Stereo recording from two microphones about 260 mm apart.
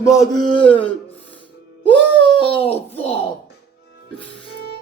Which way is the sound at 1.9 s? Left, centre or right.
Right.